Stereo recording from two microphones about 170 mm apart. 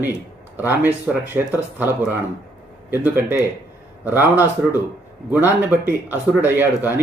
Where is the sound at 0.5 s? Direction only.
10° right (ahead or behind).